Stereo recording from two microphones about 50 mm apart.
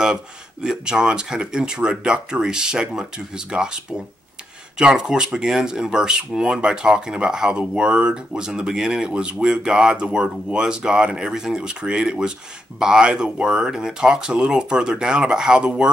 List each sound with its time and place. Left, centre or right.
0.0 s speech: centre